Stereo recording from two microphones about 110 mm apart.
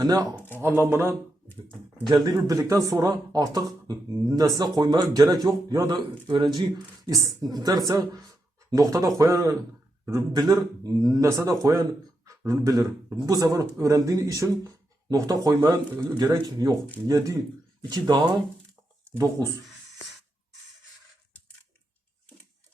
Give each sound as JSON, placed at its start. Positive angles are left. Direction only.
{"t": 0.0, "sound": "a man's voice", "side_deg": -35}
{"t": 0.3, "sound": "speech", "side_deg": 20}
{"t": 0.8, "sound": "a man's voice", "side_deg": -25}
{"t": 2.0, "sound": "a man's voice", "side_deg": -35}
{"t": 6.2, "sound": "speech", "side_deg": -45}
{"t": 7.1, "sound": "a man's voice", "side_deg": -30}